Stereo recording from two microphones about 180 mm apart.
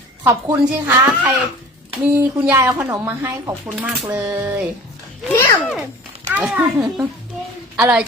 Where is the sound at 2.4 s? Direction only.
15° right (ahead or behind).